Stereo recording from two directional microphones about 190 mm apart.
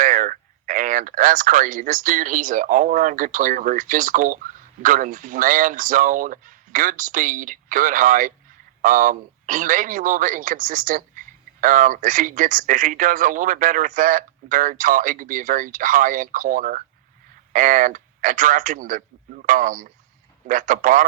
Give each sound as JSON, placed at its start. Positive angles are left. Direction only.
{"t": 0.0, "sound": "speech", "side_deg": -45}